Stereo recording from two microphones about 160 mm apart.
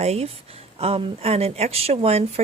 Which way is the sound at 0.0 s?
40° right (ahead or behind).